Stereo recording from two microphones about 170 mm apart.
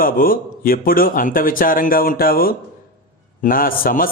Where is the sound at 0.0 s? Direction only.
55° left (ahead or behind).